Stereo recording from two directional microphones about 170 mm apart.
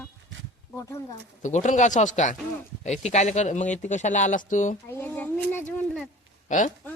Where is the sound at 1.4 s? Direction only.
45° left (ahead or behind).